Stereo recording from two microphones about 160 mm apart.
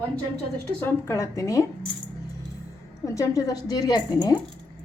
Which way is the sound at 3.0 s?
20° left (ahead or behind).